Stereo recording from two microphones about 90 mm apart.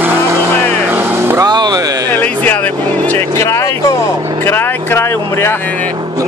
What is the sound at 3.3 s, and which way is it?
Music, 35° left (ahead or behind).